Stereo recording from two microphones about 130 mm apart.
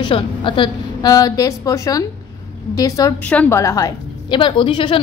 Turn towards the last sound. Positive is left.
turn(degrees=40)  # may be behind; listen again after turning